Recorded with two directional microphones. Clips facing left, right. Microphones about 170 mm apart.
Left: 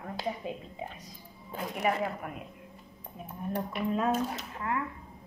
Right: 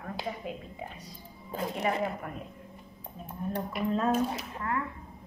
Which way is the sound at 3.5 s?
5° left (ahead or behind).